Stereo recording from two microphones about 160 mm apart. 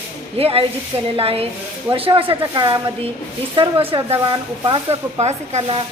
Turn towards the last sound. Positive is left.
turn(degrees=-40)  # may be behind; listen again after turning